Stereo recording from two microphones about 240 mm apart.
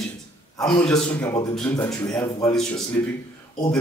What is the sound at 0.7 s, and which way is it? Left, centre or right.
A man's voice, centre.